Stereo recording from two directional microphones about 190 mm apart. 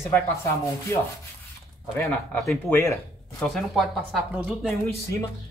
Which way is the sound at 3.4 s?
Centre (ahead or behind).